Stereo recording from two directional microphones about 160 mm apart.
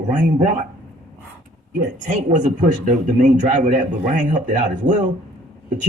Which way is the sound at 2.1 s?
50° right (ahead or behind).